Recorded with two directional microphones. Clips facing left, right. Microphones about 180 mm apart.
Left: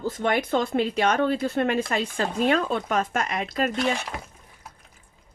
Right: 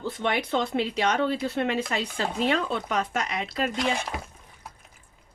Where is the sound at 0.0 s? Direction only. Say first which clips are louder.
Left 3 dB; 45° left (ahead or behind).